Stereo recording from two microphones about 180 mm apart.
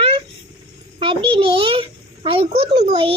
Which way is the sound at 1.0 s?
30° right (ahead or behind).